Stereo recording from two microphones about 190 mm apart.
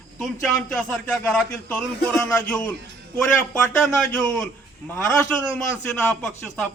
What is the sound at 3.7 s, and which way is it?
Speech, 5° left (ahead or behind).